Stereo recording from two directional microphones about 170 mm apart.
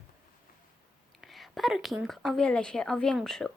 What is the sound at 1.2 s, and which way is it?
Speech, centre (ahead or behind).